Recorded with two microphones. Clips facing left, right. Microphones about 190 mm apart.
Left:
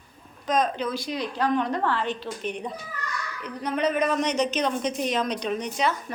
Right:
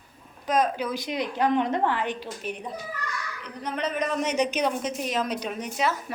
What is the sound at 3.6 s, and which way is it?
Speech, 10° left (ahead or behind).